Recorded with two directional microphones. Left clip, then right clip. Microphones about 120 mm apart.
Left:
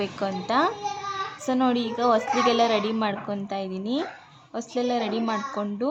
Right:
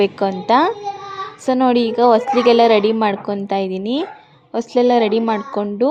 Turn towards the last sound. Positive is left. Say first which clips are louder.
# right 10 dB
turn(degrees=-45)  # may be behind; listen again after turning